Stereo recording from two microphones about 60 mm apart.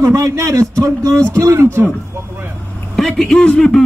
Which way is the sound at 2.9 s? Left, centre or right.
Centre.